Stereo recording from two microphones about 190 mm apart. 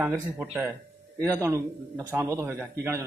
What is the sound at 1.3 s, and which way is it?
A man's voice, 15° right (ahead or behind).